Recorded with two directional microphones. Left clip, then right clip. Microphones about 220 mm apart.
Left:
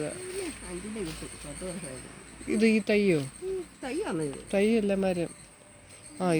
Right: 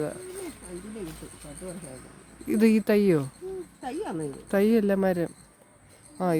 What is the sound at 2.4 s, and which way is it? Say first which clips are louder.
Speech: right 2 dB; 35° right (ahead or behind).